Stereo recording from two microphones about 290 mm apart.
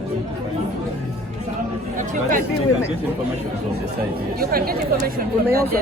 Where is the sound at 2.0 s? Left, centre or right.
Right.